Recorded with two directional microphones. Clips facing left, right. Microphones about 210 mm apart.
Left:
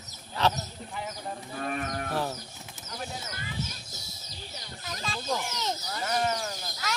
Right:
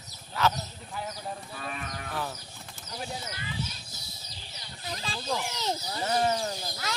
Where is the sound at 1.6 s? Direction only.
50° left (ahead or behind).